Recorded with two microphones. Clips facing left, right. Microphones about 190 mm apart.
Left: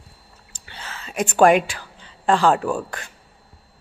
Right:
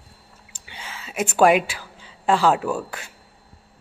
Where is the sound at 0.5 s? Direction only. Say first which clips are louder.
Left 1 dB; 10° right (ahead or behind).